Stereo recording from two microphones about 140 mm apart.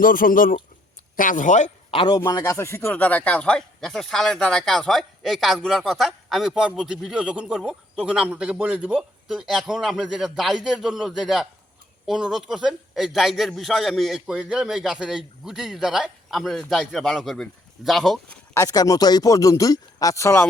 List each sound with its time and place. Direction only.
0.0 s speech: 85° left; by 1.7 s 60° left (ahead or behind)
1.9 s a man's voice: 35° left (ahead or behind)
2.2 s a man's voice: 25° left (ahead or behind); by 18.3 s centre (ahead or behind)
18.5 s speech: 25° left (ahead or behind)